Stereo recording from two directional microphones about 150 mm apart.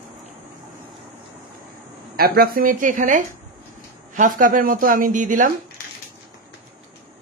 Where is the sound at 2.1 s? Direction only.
90° right; by 5.5 s 60° right (ahead or behind).